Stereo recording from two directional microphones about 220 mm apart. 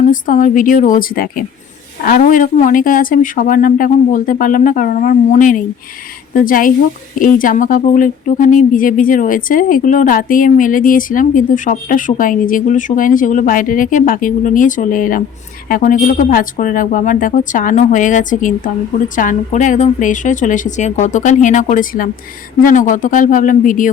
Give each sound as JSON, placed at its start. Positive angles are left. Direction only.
{"t": 0.1, "sound": "speech", "side_deg": 35}